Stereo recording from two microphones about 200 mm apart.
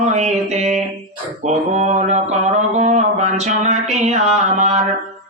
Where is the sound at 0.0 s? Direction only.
35° right (ahead or behind).